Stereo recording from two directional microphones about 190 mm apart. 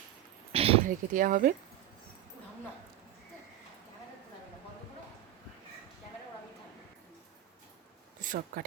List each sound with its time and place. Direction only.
0.5 s a sound: 30° right (ahead or behind)
0.9 s speech: 45° right (ahead or behind)
8.2 s speech: 45° right (ahead or behind)